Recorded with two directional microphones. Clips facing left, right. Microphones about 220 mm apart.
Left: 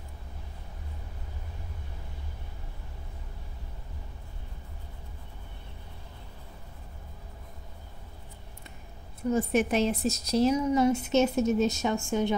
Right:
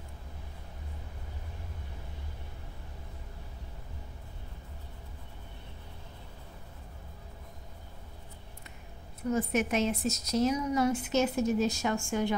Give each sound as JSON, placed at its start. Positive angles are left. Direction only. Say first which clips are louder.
{"t": 9.3, "sound": "a woman's voice", "louder": "left 3 dB", "side_deg": 30}